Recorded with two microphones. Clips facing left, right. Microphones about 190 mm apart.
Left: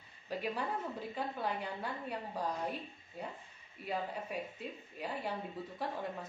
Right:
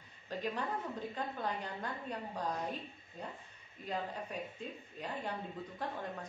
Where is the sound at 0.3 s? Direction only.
10° left (ahead or behind).